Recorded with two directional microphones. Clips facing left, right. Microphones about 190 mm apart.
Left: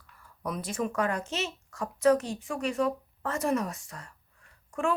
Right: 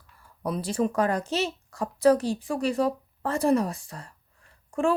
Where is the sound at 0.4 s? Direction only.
30° right (ahead or behind).